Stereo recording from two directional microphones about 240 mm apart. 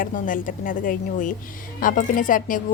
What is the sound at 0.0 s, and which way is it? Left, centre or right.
Speech, left.